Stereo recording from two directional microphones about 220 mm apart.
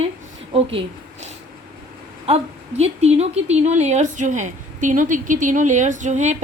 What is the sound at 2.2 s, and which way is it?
A woman's voice, 30° right (ahead or behind).